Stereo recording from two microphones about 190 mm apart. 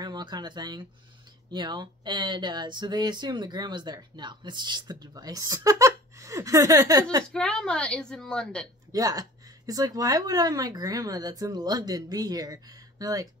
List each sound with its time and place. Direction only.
0.0 s speech: 25° right (ahead or behind)
7.3 s a woman's voice: 5° left (ahead or behind)
8.9 s speech: 20° right (ahead or behind)